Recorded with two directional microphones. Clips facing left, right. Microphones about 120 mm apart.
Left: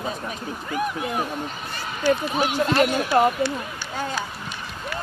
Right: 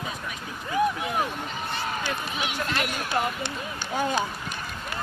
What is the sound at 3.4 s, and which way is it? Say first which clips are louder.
Speech: left 7 dB; 20° right (ahead or behind).